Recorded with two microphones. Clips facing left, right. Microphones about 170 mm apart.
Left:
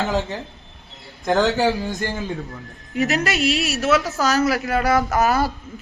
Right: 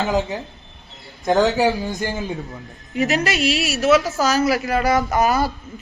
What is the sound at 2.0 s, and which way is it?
Speech, 15° right (ahead or behind).